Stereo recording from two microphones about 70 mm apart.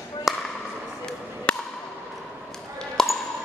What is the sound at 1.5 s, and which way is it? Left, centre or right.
Wood block, centre.